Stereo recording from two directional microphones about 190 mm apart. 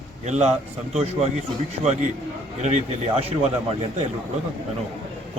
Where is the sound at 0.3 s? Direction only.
35° right (ahead or behind).